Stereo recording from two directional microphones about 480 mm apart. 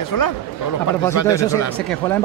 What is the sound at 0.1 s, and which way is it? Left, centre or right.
Speech, left.